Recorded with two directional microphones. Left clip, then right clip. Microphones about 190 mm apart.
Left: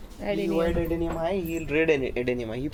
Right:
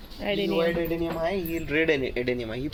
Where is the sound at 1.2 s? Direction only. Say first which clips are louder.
Even; 20° left (ahead or behind).